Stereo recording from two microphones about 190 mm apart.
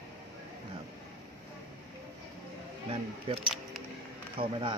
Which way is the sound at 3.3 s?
30° right (ahead or behind).